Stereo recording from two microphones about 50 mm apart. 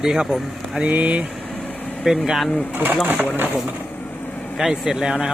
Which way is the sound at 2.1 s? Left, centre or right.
Centre.